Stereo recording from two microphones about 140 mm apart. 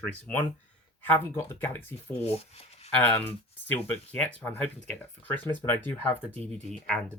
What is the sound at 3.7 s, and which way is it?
Speech, 10° left (ahead or behind).